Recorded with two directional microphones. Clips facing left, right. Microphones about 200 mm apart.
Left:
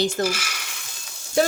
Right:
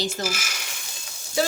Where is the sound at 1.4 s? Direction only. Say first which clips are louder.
Left 4 dB; 55° left (ahead or behind).